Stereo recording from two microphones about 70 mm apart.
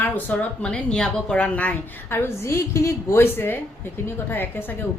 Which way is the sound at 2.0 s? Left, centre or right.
Left.